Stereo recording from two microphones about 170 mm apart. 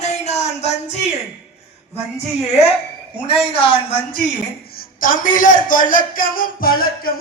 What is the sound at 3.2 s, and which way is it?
Speech, 35° left (ahead or behind).